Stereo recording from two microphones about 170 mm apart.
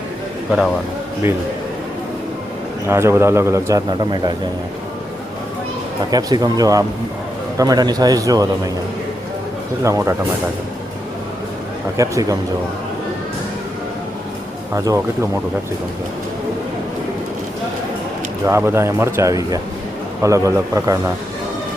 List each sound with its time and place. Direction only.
2.8 s a man's voice: 15° right (ahead or behind)
6.1 s a man's voice: 25° right (ahead or behind)
9.8 s a man's voice: 15° right (ahead or behind)
11.9 s a man's voice: 20° right (ahead or behind)
14.8 s a man's voice: 20° right (ahead or behind)
18.4 s a man's voice: 15° right (ahead or behind)